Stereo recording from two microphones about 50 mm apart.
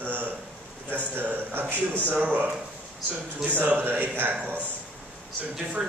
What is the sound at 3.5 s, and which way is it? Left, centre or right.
Speech, right.